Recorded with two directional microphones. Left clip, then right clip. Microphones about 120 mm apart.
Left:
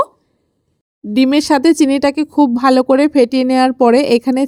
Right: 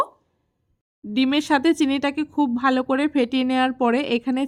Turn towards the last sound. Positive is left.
turn(degrees=50)  # may be behind; listen again after turning